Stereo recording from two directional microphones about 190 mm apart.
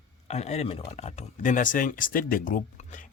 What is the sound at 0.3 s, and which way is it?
Speech, 35° left (ahead or behind).